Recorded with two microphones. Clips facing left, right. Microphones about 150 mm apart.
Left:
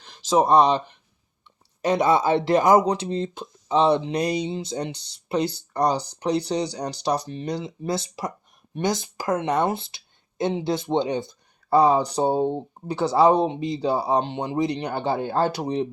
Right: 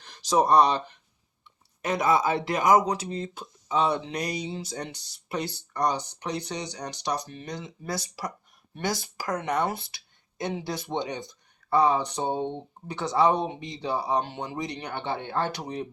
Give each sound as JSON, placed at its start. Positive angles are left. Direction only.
{"t": 0.0, "sound": "speech", "side_deg": 15}
{"t": 1.8, "sound": "speech", "side_deg": 30}